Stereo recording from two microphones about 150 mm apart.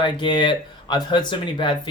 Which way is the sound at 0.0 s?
30° left (ahead or behind).